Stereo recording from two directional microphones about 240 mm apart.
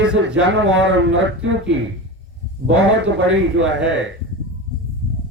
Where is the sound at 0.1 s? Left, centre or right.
Centre.